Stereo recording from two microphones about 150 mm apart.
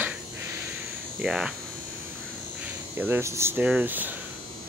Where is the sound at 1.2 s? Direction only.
5° right (ahead or behind).